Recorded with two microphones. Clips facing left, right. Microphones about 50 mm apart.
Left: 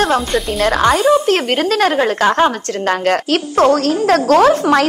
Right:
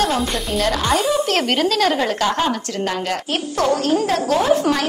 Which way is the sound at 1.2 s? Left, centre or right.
Left.